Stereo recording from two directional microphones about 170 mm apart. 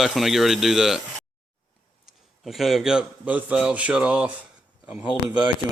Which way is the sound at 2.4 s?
Centre (ahead or behind).